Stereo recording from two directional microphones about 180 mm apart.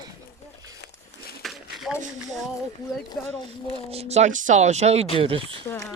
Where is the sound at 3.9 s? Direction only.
35° right (ahead or behind).